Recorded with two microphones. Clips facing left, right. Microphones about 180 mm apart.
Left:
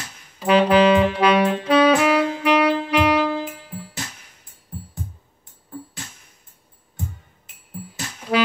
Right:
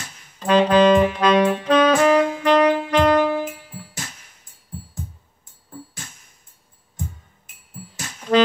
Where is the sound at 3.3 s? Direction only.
15° right (ahead or behind).